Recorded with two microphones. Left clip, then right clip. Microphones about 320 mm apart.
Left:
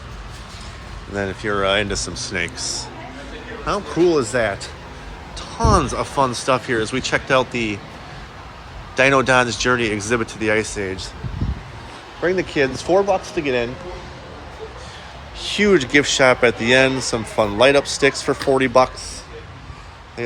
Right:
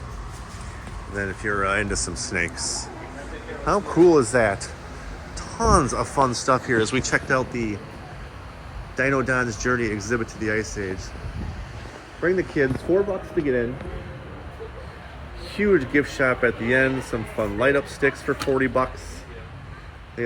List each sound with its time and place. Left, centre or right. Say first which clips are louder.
1.1 s speech: left 4 dB; centre
9.0 s speech: left 7 dB; centre
12.5 s speech: left 4 dB; centre
15.5 s speech: left 5 dB; centre